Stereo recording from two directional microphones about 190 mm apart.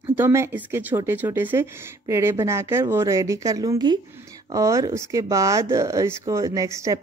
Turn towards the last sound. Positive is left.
turn(degrees=-15)  # may be behind; listen again after turning